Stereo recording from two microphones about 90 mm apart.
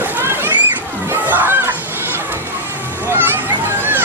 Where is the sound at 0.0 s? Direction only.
25° right (ahead or behind).